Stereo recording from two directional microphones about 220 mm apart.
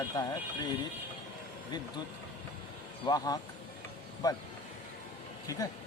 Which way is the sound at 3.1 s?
15° left (ahead or behind).